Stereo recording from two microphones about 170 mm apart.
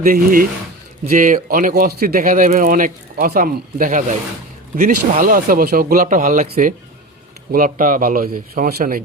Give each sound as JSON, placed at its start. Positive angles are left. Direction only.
{"t": 0.0, "sound": "speech", "side_deg": -55}